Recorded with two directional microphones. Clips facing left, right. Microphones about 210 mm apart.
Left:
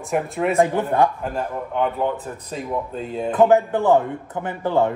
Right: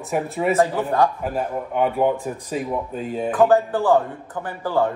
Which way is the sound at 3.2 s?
20° left (ahead or behind).